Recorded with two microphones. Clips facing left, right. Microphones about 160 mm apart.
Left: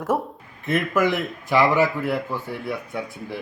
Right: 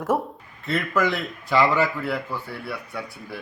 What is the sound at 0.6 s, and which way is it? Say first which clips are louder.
A man's voice: left 2 dB; 15° left (ahead or behind).